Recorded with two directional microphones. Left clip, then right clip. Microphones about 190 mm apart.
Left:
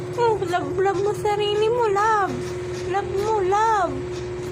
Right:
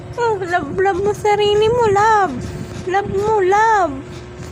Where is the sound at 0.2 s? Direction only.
35° right (ahead or behind).